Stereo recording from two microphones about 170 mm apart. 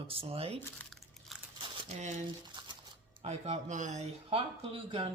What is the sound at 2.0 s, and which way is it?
Speech, 45° right (ahead or behind).